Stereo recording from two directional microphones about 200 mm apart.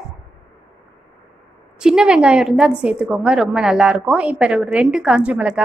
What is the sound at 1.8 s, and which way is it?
A woman's voice, 5° right (ahead or behind).